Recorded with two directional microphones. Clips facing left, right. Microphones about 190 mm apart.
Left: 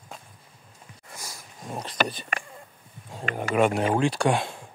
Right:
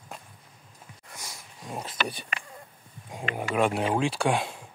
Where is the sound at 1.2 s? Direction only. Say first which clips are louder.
Left 2 dB; centre (ahead or behind).